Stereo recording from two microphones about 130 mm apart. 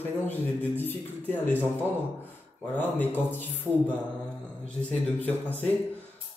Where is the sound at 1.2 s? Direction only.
15° left (ahead or behind).